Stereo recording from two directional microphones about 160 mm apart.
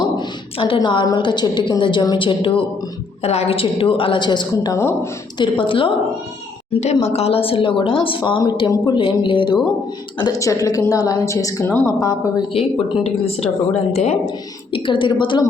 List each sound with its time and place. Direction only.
0.0 s a woman's voice: 30° left (ahead or behind)
5.4 s a woman's voice: 30° left (ahead or behind)
6.7 s a woman's voice: 45° left (ahead or behind)
10.2 s a woman's voice: 20° left (ahead or behind)
12.5 s a woman's voice: 35° left (ahead or behind)
14.7 s a woman's voice: 30° left (ahead or behind)